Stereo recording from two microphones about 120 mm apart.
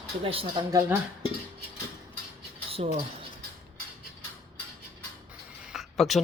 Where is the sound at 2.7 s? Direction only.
55° right (ahead or behind).